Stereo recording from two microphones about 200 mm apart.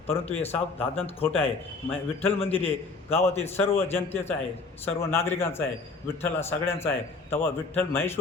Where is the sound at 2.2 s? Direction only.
30° left (ahead or behind).